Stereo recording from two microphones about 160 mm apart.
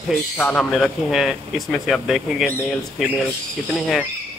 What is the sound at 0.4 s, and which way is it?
A man's voice, 10° left (ahead or behind).